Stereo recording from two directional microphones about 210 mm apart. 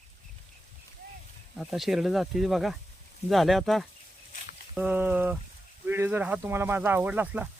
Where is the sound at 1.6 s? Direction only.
Centre (ahead or behind).